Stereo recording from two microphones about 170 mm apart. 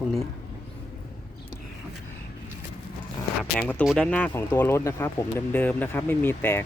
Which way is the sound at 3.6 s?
10° left (ahead or behind).